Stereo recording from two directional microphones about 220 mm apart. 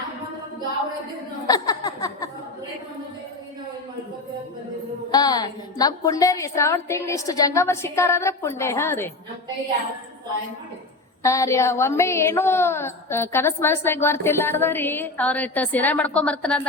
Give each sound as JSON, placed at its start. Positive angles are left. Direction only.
{"t": 1.5, "sound": "a sound", "side_deg": 15}
{"t": 5.1, "sound": "a woman's voice", "side_deg": 15}
{"t": 11.2, "sound": "a woman's voice", "side_deg": 15}